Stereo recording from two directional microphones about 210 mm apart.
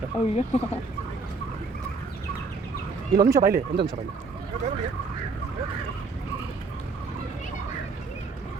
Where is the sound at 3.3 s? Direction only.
45° right (ahead or behind).